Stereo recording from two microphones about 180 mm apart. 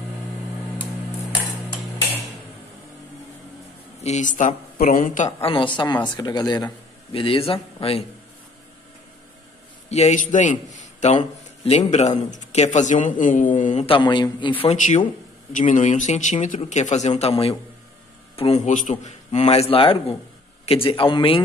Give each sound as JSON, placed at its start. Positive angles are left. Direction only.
{"t": 4.0, "sound": "a woman's voice", "side_deg": 40}
{"t": 5.5, "sound": "a man's voice", "side_deg": 25}
{"t": 9.8, "sound": "a man's voice", "side_deg": 40}
{"t": 13.8, "sound": "a man's voice", "side_deg": 25}
{"t": 14.6, "sound": "a man's voice", "side_deg": 35}